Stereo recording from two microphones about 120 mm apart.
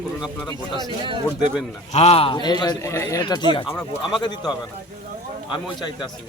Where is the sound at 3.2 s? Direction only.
40° left (ahead or behind).